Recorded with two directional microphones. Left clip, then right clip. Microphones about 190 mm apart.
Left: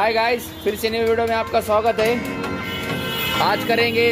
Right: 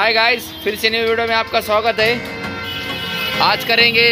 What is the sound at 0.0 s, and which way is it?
Speech, 5° left (ahead or behind).